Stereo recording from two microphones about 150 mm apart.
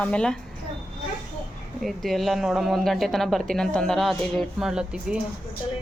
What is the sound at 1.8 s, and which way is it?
A woman's voice, centre (ahead or behind).